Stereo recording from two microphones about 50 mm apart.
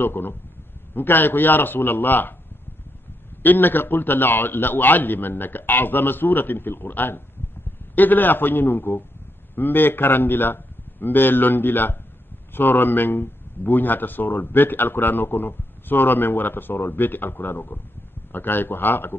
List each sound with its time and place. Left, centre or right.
0.0 s a man's voice: left
3.4 s a man's voice: left